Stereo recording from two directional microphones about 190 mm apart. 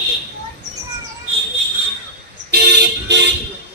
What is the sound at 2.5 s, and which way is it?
Vehicle, 60° right (ahead or behind).